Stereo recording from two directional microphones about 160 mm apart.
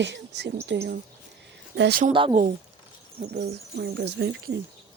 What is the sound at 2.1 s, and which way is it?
Speech, 30° right (ahead or behind).